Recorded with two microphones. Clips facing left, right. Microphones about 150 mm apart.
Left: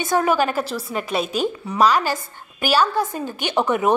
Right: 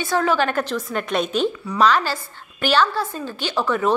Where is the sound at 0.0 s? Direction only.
15° left (ahead or behind).